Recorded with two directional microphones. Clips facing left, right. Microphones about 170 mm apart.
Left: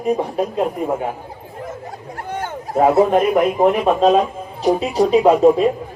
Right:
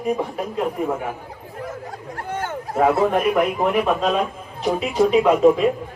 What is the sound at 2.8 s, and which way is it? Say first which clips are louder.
A man's voice: left 4 dB; 25° left (ahead or behind).